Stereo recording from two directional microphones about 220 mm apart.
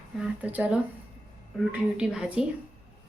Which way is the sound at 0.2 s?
5° right (ahead or behind).